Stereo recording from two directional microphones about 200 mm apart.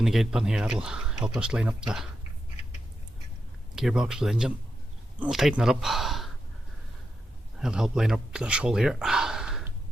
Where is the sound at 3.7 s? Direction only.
5° right (ahead or behind).